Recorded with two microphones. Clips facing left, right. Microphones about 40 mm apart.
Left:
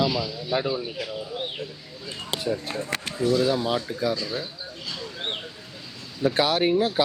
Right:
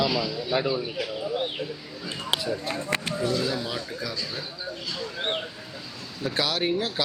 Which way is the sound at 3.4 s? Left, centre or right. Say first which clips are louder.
Left 6 dB; left.